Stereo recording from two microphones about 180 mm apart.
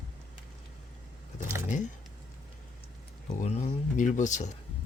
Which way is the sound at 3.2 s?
40° left (ahead or behind).